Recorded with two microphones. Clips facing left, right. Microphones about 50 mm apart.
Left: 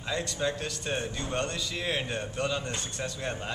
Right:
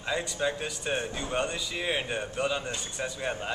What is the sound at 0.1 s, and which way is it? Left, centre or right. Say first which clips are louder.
A man's voice: right 1 dB; centre.